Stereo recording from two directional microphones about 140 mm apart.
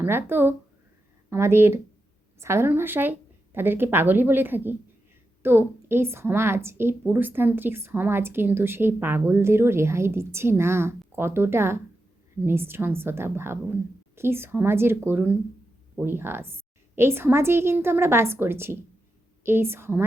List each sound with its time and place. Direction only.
0.0 s a woman's voice: 15° right (ahead or behind)